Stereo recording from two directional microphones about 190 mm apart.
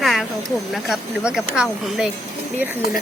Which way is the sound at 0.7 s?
Centre (ahead or behind).